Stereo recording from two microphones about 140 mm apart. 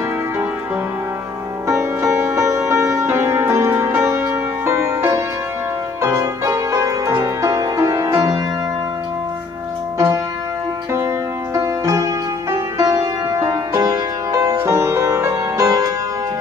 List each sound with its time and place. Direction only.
1.7 s music: 20° right (ahead or behind)
9.9 s music: 25° right (ahead or behind)